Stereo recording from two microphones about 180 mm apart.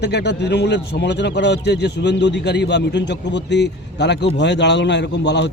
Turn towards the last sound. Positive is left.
turn(degrees=75)  # may be behind; listen again after turning